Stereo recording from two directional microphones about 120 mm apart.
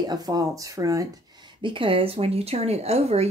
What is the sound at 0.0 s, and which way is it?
Speech, 35° right (ahead or behind).